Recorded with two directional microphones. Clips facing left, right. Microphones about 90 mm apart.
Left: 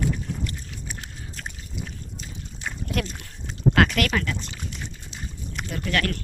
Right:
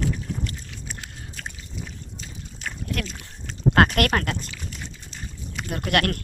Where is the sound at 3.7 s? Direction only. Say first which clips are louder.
Right 3 dB; 45° right (ahead or behind).